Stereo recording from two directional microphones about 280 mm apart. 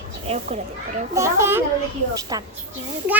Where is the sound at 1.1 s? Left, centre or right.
Centre.